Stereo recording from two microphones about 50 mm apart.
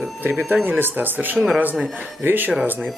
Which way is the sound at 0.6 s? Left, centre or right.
Right.